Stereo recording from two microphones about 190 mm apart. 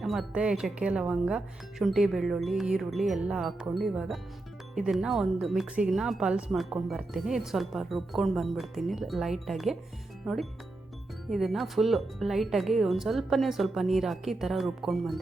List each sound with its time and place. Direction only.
0.0 s speech: centre (ahead or behind)
11.3 s speech: centre (ahead or behind)